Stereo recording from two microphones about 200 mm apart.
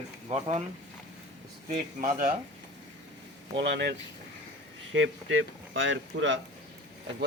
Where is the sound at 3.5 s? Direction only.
55° right (ahead or behind).